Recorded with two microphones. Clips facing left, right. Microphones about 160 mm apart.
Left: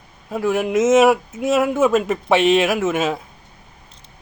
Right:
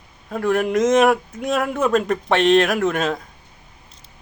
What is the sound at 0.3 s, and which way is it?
A man's voice, 5° left (ahead or behind).